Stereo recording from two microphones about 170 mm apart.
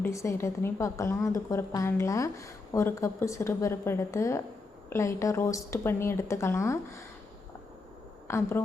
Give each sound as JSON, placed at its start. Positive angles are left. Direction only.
{"t": 0.0, "sound": "a woman's voice", "side_deg": 15}
{"t": 8.3, "sound": "a woman's voice", "side_deg": 15}